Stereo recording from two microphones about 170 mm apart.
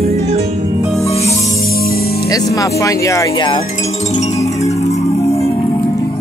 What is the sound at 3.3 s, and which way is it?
Music, 30° left (ahead or behind).